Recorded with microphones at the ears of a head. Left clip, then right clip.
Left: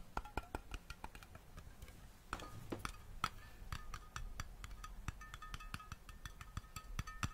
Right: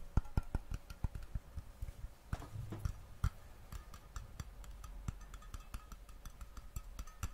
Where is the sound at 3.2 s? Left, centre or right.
Left.